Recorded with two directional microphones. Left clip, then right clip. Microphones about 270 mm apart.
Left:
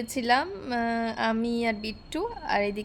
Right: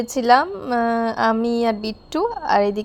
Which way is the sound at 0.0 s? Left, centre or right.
Right.